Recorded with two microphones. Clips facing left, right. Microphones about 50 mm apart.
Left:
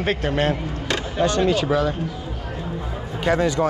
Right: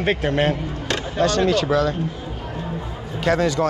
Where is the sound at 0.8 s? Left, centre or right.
Centre.